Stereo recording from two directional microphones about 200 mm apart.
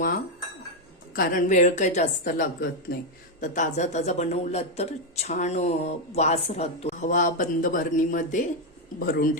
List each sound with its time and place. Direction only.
1.1 s speech: 45° left (ahead or behind)